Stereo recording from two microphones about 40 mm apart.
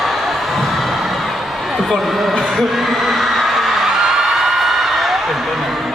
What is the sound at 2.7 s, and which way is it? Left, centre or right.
Music, centre.